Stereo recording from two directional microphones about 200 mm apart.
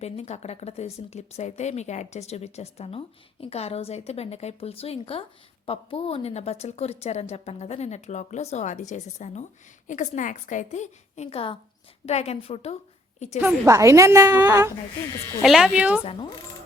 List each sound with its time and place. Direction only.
0.0 s a woman's voice: 35° left (ahead or behind)
13.4 s a woman's voice: 15° right (ahead or behind)
15.4 s speech: centre (ahead or behind)